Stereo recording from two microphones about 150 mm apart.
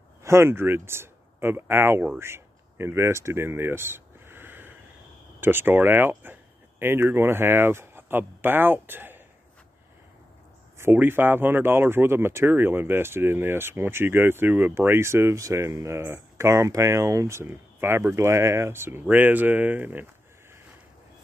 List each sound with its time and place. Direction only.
0.2 s speech: 15° right (ahead or behind)
10.8 s speech: 15° right (ahead or behind)